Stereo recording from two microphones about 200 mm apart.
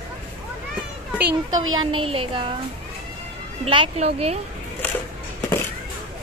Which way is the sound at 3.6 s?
30° right (ahead or behind).